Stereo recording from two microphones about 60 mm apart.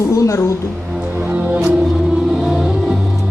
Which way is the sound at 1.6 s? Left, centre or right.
Centre.